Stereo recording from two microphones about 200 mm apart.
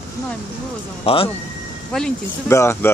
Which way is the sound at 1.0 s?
25° left (ahead or behind).